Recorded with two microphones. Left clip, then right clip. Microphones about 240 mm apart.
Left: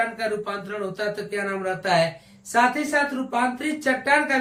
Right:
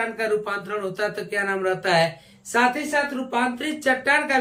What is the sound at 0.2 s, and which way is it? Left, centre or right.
Speech, centre.